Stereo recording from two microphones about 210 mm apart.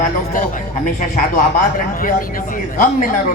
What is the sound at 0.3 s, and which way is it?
Speech, 40° left (ahead or behind).